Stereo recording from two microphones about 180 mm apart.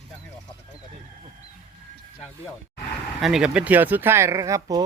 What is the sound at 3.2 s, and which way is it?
Speech, 5° right (ahead or behind).